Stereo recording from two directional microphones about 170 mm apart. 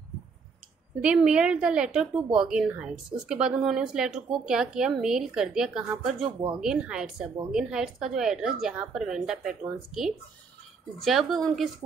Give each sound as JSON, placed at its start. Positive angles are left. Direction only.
{"t": 1.0, "sound": "a woman's voice", "side_deg": -5}
{"t": 6.2, "sound": "speech", "side_deg": -30}
{"t": 6.6, "sound": "a woman's voice", "side_deg": -5}
{"t": 11.0, "sound": "a woman's voice", "side_deg": 0}